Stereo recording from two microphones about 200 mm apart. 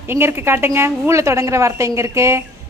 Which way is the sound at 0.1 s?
10° right (ahead or behind).